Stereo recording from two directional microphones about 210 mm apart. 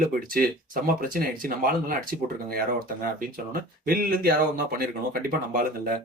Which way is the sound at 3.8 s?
45° right (ahead or behind).